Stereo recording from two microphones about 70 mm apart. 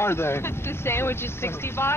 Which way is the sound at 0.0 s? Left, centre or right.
Left.